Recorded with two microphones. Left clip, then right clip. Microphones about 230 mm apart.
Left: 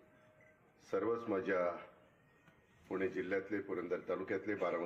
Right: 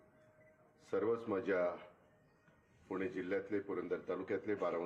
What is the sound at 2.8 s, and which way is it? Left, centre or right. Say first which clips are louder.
A man's voice: left 2 dB; right.